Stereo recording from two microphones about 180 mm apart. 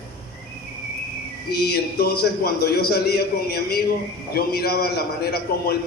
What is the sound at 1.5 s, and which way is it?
A man's voice, 60° left (ahead or behind).